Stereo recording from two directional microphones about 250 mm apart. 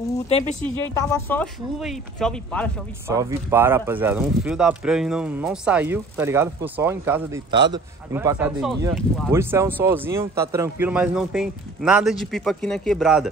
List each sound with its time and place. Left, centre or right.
0.3 s speech: left
0.9 s a man's voice: centre
3.1 s a man's voice: centre